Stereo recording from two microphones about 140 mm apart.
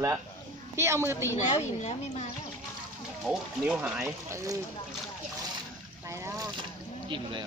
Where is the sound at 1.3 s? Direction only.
55° left (ahead or behind).